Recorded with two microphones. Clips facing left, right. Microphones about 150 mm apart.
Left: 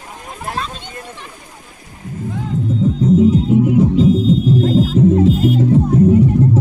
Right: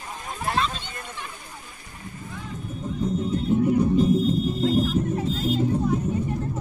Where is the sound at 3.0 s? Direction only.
90° left.